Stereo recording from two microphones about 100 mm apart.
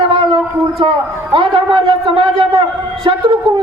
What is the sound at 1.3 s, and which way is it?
A man's voice, 60° right (ahead or behind).